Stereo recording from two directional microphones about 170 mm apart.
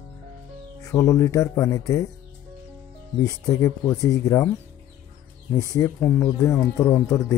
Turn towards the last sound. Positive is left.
turn(degrees=15)  # may be behind; listen again after turning